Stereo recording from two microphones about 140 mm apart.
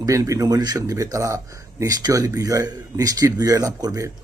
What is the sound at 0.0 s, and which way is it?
Speech, 25° right (ahead or behind).